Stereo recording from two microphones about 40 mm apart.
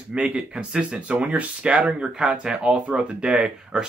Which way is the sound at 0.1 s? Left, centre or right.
Right.